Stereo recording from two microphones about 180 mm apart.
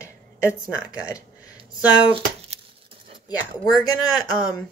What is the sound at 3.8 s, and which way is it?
Speech, 20° left (ahead or behind).